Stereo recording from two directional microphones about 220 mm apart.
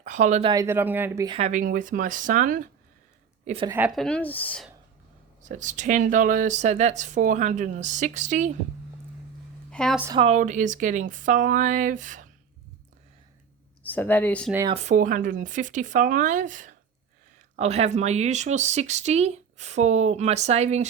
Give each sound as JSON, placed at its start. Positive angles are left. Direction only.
{"t": 0.0, "sound": "speech", "side_deg": -35}
{"t": 0.5, "sound": "speech", "side_deg": -10}
{"t": 1.4, "sound": "speech", "side_deg": -35}
{"t": 3.4, "sound": "a woman's voice", "side_deg": -25}
{"t": 3.7, "sound": "a woman's voice", "side_deg": -5}
{"t": 5.4, "sound": "speech", "side_deg": -35}
{"t": 9.6, "sound": "a woman's voice", "side_deg": 5}
{"t": 10.2, "sound": "speech", "side_deg": -30}
{"t": 13.8, "sound": "speech", "side_deg": 10}
{"t": 14.7, "sound": "speech", "side_deg": -30}